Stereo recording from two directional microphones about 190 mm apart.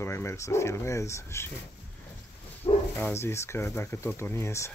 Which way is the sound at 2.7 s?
25° left (ahead or behind).